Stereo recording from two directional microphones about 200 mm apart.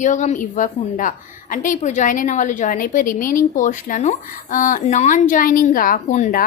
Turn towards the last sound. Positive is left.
turn(degrees=40)  # may be behind; listen again after turning